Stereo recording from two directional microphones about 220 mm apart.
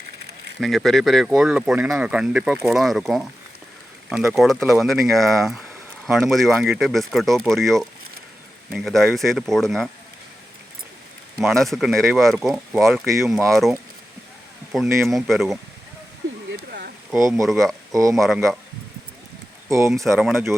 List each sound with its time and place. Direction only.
0.6 s speech: centre (ahead or behind)
11.4 s speech: centre (ahead or behind)
12.8 s speech: 15° right (ahead or behind)
13.5 s speech: centre (ahead or behind)
16.5 s a sound: 50° right (ahead or behind)
17.2 s speech: 15° right (ahead or behind)
17.4 s speech: centre (ahead or behind)
17.9 s speech: 15° right (ahead or behind)
20.1 s speech: centre (ahead or behind)